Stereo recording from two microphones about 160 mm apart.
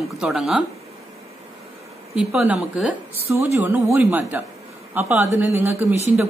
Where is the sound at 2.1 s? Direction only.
10° right (ahead or behind).